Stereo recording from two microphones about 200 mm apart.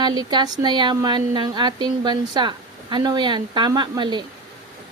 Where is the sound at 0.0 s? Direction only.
20° right (ahead or behind).